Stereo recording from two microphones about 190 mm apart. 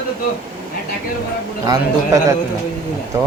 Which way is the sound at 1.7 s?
15° right (ahead or behind).